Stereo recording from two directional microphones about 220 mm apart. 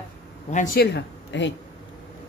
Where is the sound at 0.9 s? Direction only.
55° left (ahead or behind).